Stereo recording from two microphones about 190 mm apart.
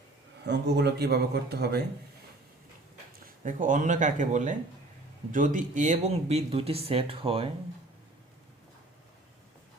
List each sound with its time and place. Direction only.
0.4 s a man's voice: 60° right (ahead or behind)
3.2 s speech: 45° right (ahead or behind)